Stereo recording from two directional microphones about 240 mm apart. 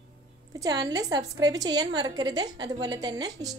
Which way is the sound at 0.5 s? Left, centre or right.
Centre.